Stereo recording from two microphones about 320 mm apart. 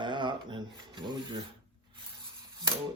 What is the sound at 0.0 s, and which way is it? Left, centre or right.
Filing, centre.